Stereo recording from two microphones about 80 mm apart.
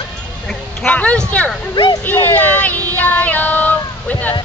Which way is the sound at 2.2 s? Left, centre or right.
Centre.